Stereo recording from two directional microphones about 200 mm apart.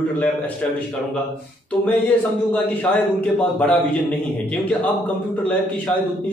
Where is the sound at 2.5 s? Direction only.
5° left (ahead or behind).